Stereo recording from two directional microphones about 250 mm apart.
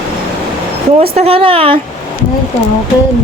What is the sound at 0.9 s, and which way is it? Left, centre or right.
Speech, right.